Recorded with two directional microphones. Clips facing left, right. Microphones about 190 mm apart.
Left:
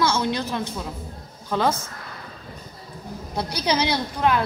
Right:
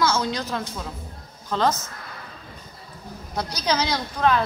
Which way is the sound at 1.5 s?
10° left (ahead or behind).